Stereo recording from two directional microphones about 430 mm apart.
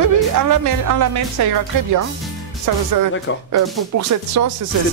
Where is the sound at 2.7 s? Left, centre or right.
Right.